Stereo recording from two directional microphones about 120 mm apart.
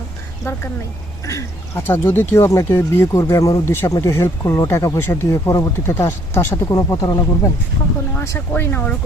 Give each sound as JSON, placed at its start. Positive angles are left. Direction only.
{"t": 1.2, "sound": "speech", "side_deg": 25}
{"t": 8.1, "sound": "speech", "side_deg": 20}